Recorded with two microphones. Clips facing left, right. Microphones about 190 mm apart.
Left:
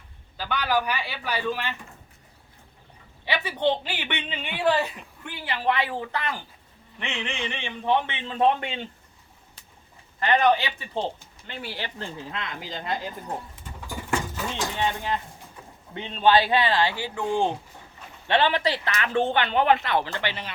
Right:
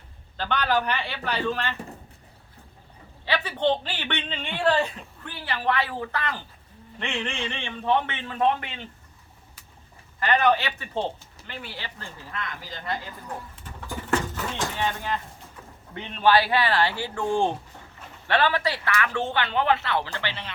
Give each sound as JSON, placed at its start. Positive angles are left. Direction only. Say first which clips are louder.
{"t": 0.3, "sound": "a woman's voice", "louder": "right 1 dB", "side_deg": 10}
{"t": 3.2, "sound": "a woman's voice", "louder": "even", "side_deg": 15}
{"t": 10.2, "sound": "a woman's voice", "louder": "left 1 dB", "side_deg": 20}
{"t": 13.8, "sound": "patter", "louder": "right 2 dB", "side_deg": 10}
{"t": 14.8, "sound": "speech", "louder": "left 3 dB", "side_deg": 20}